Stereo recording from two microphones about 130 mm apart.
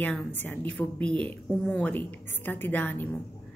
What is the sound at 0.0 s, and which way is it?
A woman's voice, 15° left (ahead or behind).